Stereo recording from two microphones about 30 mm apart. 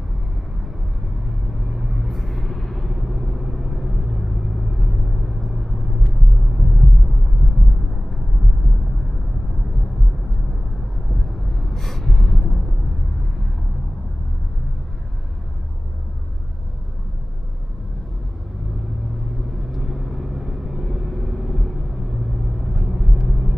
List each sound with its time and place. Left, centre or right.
1.5 s vehicle: centre
6.4 s a sound: centre
11.1 s vehicle: centre
11.7 s gasp: centre
19.7 s vehicle: centre